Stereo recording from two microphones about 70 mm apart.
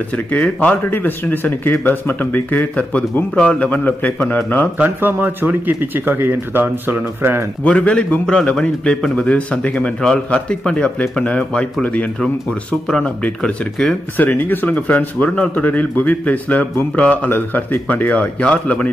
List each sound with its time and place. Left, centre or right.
0.6 s speech: left
4.7 s speech: right
7.6 s speech: centre
14.1 s speech: left